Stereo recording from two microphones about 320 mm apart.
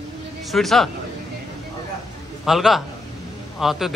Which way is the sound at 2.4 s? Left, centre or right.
Centre.